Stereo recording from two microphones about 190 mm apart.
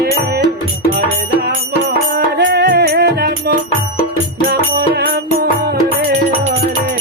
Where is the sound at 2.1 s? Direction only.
65° right (ahead or behind).